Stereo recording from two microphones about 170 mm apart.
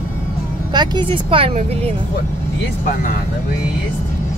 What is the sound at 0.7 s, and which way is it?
Speech, 25° right (ahead or behind).